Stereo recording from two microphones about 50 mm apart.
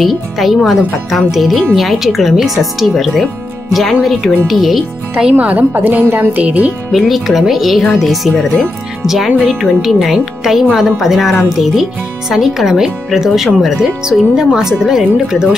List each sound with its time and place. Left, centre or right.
0.0 s a woman's voice: centre
5.4 s a woman's voice: right
6.9 s a woman's voice: centre